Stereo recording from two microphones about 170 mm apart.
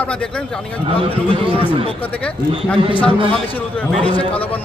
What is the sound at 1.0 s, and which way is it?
Speech, 30° right (ahead or behind).